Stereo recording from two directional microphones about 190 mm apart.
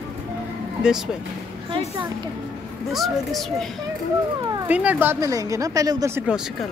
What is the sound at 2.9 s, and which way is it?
Speech, centre (ahead or behind).